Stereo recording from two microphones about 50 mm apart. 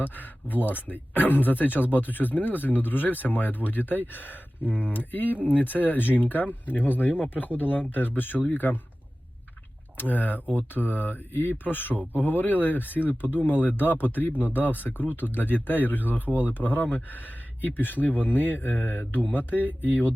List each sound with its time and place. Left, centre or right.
0.0 s speech: left
10.0 s speech: left